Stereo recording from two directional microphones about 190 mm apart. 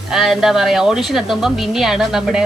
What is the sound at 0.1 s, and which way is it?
A woman's voice, centre (ahead or behind).